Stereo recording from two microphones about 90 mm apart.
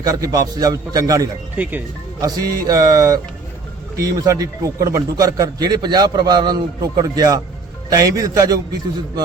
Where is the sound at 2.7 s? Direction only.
45° right (ahead or behind).